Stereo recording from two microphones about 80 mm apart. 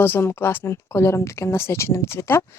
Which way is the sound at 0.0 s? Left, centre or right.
Left.